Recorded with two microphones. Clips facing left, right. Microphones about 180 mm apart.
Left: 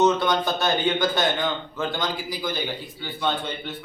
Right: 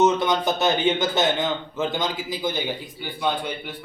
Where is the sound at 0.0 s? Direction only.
20° right (ahead or behind).